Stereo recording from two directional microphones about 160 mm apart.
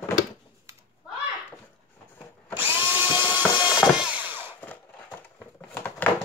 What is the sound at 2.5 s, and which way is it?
Drill, 15° right (ahead or behind).